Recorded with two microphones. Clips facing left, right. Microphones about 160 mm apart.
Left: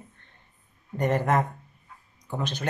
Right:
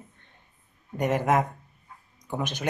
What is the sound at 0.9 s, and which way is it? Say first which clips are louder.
Speech: even; 10° right (ahead or behind).